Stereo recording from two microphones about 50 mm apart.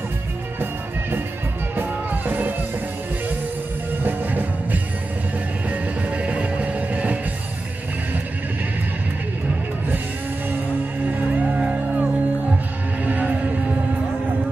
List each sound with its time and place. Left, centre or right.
1.8 s music: right
4.0 s music: right
5.7 s music: right
11.3 s music: right